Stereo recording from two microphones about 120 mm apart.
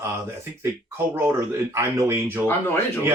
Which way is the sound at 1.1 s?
20° right (ahead or behind).